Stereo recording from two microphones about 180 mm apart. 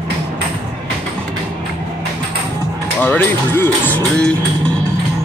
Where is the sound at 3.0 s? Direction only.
10° left (ahead or behind).